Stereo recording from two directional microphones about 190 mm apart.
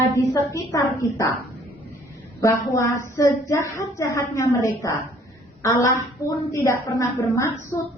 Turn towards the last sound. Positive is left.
turn(degrees=15)  # may be behind; listen again after turning